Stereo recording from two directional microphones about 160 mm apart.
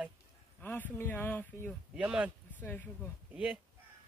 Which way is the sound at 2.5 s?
10° left (ahead or behind).